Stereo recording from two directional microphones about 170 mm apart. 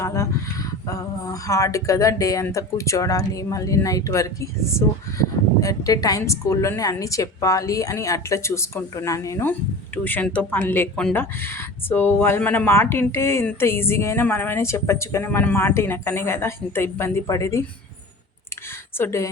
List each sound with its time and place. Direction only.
0.0 s a sound: 15° left (ahead or behind)
0.9 s speech: 20° left (ahead or behind)
18.9 s speech: 15° left (ahead or behind)